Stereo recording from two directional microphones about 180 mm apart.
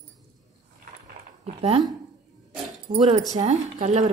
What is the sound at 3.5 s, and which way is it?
Speech, 45° right (ahead or behind).